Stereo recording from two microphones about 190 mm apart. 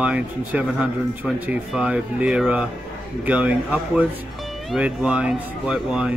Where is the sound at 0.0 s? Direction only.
5° right (ahead or behind).